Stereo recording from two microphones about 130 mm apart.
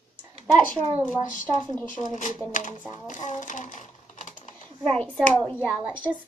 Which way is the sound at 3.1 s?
70° left (ahead or behind).